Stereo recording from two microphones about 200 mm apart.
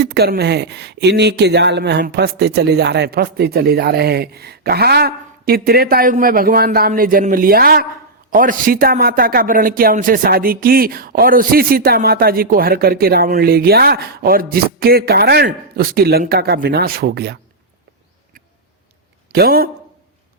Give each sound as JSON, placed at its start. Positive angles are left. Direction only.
{"t": 0.0, "sound": "speech", "side_deg": -55}
{"t": 19.3, "sound": "speech", "side_deg": -50}